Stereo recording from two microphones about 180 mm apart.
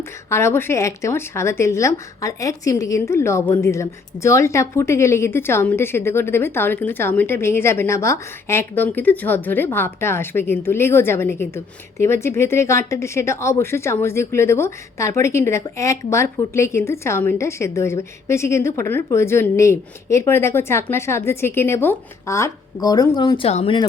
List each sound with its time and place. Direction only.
0.3 s a woman's voice: 15° left (ahead or behind); by 23.8 s 35° left (ahead or behind)